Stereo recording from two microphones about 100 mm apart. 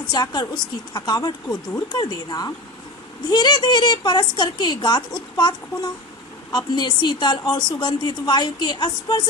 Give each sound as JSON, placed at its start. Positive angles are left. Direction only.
{"t": 0.1, "sound": "a woman's voice", "side_deg": 40}